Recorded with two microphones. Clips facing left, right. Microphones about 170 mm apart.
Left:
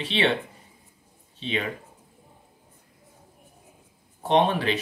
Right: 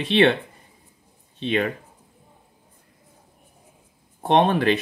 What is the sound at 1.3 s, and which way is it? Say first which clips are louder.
Speech: right 6 dB; 55° right (ahead or behind).